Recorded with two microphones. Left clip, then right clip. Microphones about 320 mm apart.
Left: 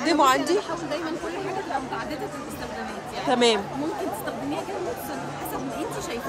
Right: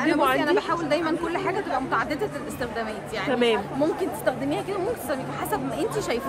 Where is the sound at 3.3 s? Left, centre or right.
Centre.